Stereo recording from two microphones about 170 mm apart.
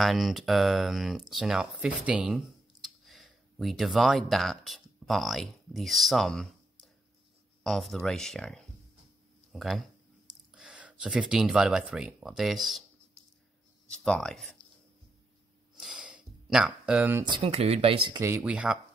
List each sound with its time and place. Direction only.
0.0 s speech: centre (ahead or behind)
7.6 s speech: centre (ahead or behind)
13.8 s speech: 5° left (ahead or behind)
15.7 s a sound: 5° right (ahead or behind)
17.2 s speech: 30° right (ahead or behind)
18.2 s speech: 10° right (ahead or behind)